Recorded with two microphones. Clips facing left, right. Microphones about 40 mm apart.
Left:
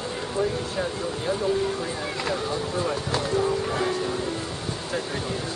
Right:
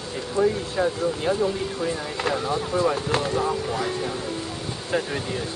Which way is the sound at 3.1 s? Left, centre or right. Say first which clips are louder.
Right 2 dB; right.